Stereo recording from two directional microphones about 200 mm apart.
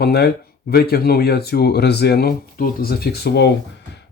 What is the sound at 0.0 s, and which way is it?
Speech, 55° left (ahead or behind).